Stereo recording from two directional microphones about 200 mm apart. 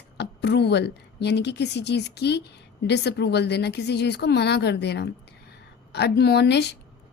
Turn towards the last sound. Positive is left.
turn(degrees=55)  # may be behind; listen again after turning